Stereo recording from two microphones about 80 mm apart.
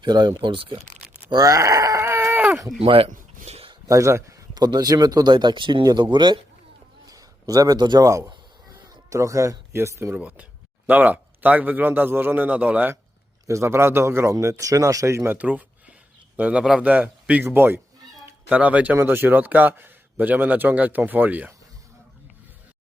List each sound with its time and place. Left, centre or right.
0.0 s speech: right
1.3 s speech: right
2.0 s a sound: right
3.8 s speech: right
4.5 s speech: right
5.8 s speech: right
7.1 s a sound: right
7.8 s speech: right
8.0 s speech: right
9.7 s speech: right
10.2 s a man's voice: centre
13.5 s speech: right
15.4 s a sound: centre
16.4 s a man's voice: centre